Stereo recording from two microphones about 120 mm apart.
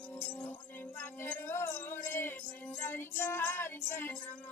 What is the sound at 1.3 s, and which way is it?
Music, 20° left (ahead or behind).